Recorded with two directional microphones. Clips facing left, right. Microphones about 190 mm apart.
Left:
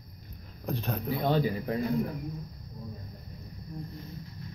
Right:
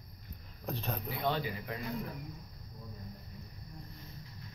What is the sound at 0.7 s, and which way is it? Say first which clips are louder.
Speech: left 5 dB; centre (ahead or behind).